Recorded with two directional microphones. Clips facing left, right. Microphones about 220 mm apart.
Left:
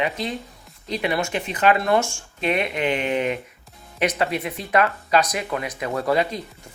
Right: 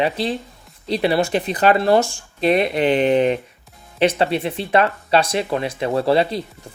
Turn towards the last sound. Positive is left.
turn(degrees=-30)  # may be behind; listen again after turning